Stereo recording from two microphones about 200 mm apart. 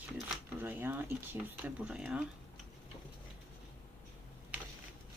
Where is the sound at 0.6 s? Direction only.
10° right (ahead or behind).